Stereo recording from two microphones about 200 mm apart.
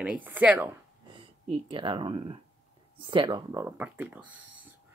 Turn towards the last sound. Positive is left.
turn(degrees=-10)  # may be behind; listen again after turning